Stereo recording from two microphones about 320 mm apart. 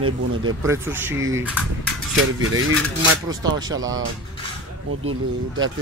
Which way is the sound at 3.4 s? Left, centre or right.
Centre.